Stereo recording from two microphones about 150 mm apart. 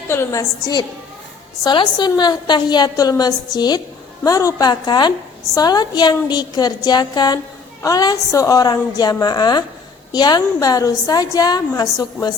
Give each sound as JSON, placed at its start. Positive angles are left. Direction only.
{"t": 0.1, "sound": "a woman's voice", "side_deg": 20}